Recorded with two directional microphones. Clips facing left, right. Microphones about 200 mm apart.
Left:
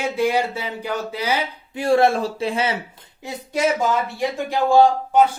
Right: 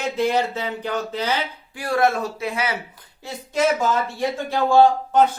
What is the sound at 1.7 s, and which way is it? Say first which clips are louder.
Speech: left 4 dB; 25° left (ahead or behind).